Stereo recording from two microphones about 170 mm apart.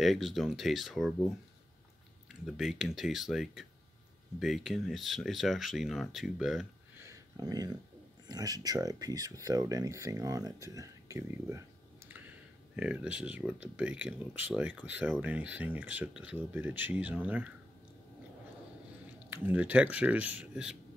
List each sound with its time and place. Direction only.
0.0 s speech: centre (ahead or behind)
2.4 s speech: centre (ahead or behind)
7.0 s a sound: 20° right (ahead or behind)
8.3 s speech: 20° right (ahead or behind)
12.7 s speech: 5° right (ahead or behind)
19.3 s speech: 10° right (ahead or behind)